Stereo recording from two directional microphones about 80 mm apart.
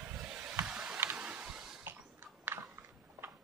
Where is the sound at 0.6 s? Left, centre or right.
Centre.